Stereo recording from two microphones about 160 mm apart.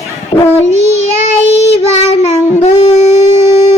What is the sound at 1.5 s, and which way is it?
Child singing, 40° left (ahead or behind).